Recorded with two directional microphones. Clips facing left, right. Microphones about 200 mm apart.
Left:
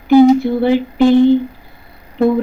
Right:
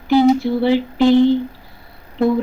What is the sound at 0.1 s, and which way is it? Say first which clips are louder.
Humming: left 5 dB; 50° left (ahead or behind).